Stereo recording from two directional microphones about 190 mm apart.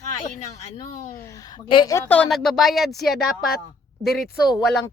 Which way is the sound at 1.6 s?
25° left (ahead or behind).